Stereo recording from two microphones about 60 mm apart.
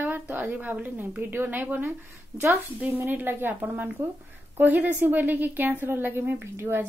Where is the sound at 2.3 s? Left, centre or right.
Right.